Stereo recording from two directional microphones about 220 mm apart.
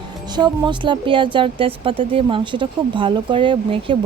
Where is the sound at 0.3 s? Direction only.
20° right (ahead or behind).